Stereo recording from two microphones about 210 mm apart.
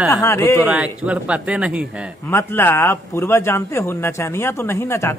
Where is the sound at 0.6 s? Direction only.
5° right (ahead or behind).